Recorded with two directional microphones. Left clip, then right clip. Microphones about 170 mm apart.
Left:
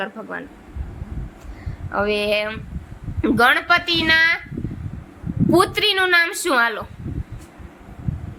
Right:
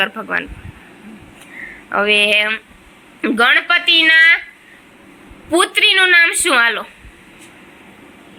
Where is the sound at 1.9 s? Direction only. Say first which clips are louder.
Right 7 dB; centre (ahead or behind).